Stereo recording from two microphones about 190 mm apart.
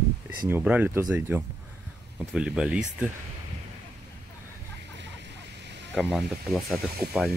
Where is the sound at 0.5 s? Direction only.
10° right (ahead or behind).